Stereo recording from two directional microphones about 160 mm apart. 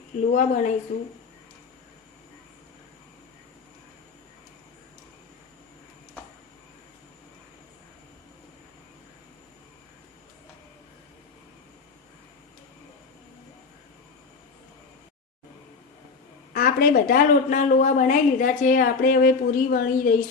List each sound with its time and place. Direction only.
0.3 s a woman's voice: 50° left (ahead or behind)
16.5 s a woman's voice: 65° left (ahead or behind)